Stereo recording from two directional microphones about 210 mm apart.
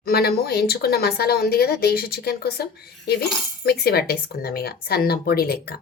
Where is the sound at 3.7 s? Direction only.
50° left (ahead or behind).